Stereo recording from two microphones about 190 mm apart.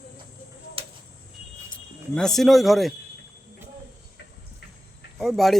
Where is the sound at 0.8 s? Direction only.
30° right (ahead or behind).